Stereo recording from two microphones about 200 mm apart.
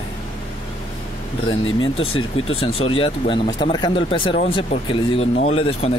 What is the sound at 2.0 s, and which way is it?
Speech, 30° left (ahead or behind).